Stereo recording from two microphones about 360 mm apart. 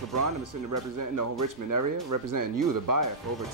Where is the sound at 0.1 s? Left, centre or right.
Right.